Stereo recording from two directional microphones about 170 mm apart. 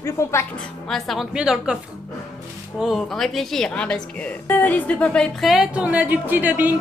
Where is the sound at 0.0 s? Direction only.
15° left (ahead or behind).